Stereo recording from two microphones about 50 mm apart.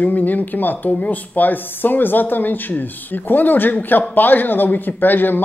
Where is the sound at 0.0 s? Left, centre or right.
Left.